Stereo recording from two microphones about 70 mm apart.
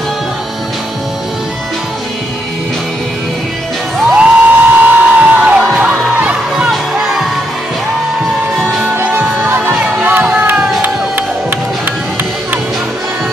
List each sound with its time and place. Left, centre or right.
4.1 s music: right
6.7 s music: centre
8.8 s music: right
9.8 s music: centre
10.0 s a sound: right
10.8 s music: right